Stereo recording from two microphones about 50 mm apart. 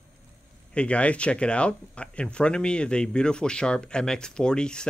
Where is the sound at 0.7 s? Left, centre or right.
Left.